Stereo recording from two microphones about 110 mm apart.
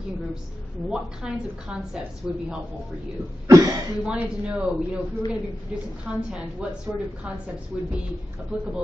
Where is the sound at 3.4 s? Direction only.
30° right (ahead or behind).